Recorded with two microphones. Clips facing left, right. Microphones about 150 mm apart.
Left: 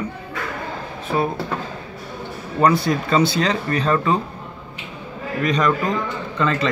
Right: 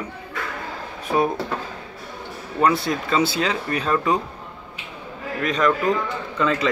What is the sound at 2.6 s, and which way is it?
Speech, centre (ahead or behind).